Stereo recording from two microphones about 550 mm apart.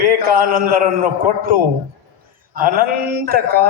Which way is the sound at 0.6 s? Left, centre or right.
Right.